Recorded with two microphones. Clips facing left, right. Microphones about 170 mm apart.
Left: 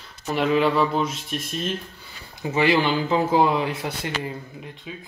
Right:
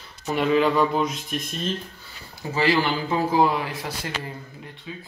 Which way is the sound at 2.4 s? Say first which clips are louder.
Left 2 dB; 20° left (ahead or behind).